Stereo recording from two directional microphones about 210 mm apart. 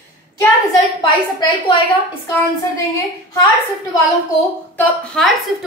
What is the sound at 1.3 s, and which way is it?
Speech, 20° left (ahead or behind).